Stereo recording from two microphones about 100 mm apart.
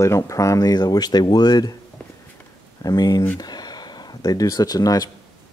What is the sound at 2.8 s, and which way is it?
Speech, 45° left (ahead or behind).